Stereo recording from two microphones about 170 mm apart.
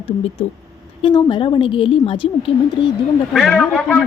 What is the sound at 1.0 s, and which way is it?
A woman's voice, 30° left (ahead or behind).